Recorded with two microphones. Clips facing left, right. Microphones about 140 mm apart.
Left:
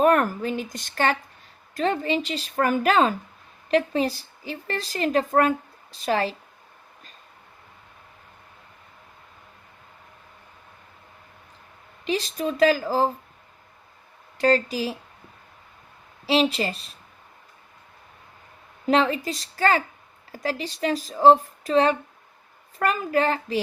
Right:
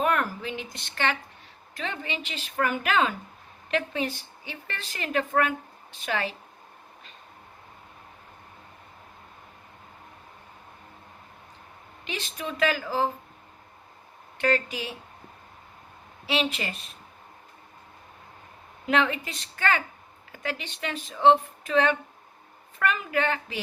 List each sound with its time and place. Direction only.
0.0 s a woman's voice: 45° left (ahead or behind)
12.0 s a woman's voice: 35° left (ahead or behind)
14.3 s a woman's voice: 35° left (ahead or behind)
16.2 s a woman's voice: 35° left (ahead or behind)
18.9 s a woman's voice: 35° left (ahead or behind)